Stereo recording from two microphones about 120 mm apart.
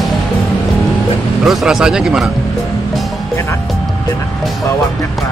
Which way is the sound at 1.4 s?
5° right (ahead or behind).